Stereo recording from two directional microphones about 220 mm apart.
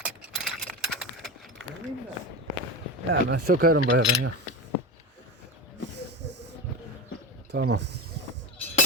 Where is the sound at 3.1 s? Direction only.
45° right (ahead or behind).